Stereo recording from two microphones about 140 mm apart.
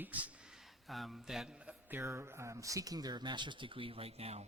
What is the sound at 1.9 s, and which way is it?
Speech, 15° right (ahead or behind).